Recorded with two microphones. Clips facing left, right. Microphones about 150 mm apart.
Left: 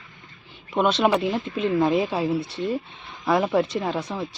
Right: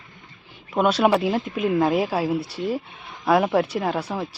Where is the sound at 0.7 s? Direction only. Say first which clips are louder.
Right 1 dB; 5° right (ahead or behind).